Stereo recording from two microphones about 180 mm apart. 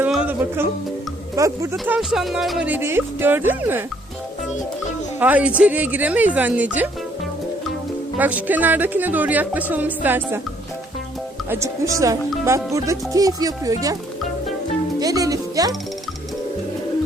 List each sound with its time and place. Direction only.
0.0 s music: 5° right (ahead or behind)
1.4 s speech: 20° right (ahead or behind)
1.7 s speech: centre (ahead or behind)
5.2 s speech: 10° right (ahead or behind)
8.2 s speech: 10° right (ahead or behind)
11.4 s speech: 15° right (ahead or behind)
14.9 s music: 20° right (ahead or behind)